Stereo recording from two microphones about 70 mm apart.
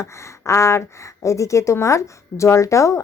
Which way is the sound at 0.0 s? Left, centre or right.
Left.